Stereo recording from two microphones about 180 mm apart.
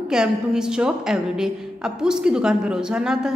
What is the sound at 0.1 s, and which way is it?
A woman's voice, 5° right (ahead or behind).